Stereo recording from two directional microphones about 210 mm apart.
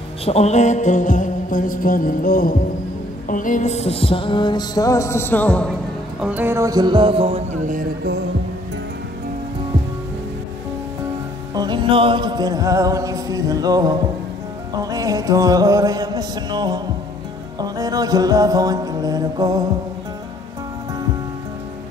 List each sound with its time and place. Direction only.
0.2 s a sound: 30° left (ahead or behind)
3.3 s music: 40° left (ahead or behind); by 5.7 s 5° left (ahead or behind)
6.2 s music: 10° right (ahead or behind); by 8.1 s 35° right (ahead or behind)
11.5 s music: 20° right (ahead or behind)